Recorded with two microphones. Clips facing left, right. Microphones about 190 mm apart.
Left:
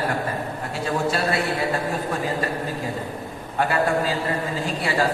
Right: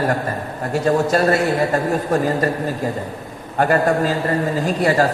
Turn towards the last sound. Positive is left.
turn(degrees=-45)  # may be behind; listen again after turning